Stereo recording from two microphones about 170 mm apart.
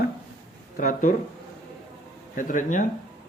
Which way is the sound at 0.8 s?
55° left (ahead or behind).